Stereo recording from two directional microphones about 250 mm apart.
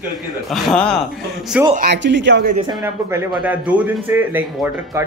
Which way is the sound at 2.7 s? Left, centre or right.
Centre.